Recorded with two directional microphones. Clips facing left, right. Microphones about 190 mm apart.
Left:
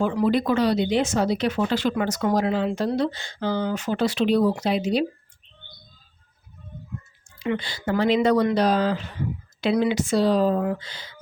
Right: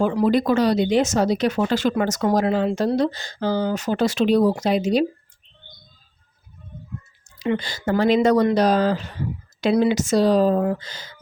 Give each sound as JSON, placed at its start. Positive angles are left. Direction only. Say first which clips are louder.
{"t": 0.0, "sound": "speech", "louder": "right 3 dB", "side_deg": -40}
{"t": 7.5, "sound": "speech", "louder": "right 3 dB", "side_deg": -45}